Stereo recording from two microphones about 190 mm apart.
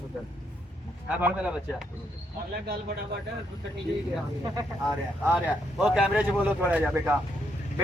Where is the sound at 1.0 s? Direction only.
5° right (ahead or behind).